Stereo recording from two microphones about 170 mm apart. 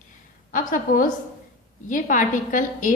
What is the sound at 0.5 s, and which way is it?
A woman's voice, 50° left (ahead or behind).